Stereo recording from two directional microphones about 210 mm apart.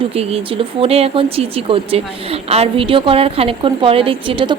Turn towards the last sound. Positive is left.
turn(degrees=-25)  # may be behind; listen again after turning